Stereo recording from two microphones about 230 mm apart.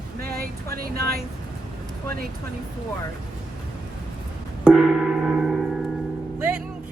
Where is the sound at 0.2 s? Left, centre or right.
Right.